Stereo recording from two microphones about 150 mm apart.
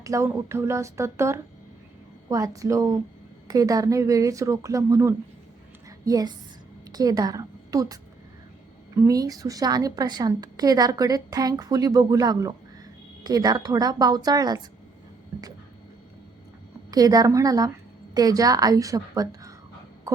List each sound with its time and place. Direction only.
0.0 s a woman's voice: 20° right (ahead or behind)
9.0 s a woman's voice: 25° right (ahead or behind)
16.9 s a woman's voice: 25° right (ahead or behind)
20.1 s a sound: 20° right (ahead or behind)